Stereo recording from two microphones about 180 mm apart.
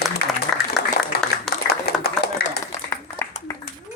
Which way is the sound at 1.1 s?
60° left (ahead or behind).